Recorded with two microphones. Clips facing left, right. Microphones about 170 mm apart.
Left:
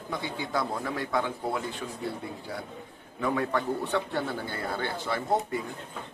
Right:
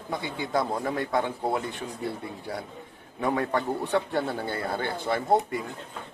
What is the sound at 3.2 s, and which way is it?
A man's voice, 45° right (ahead or behind).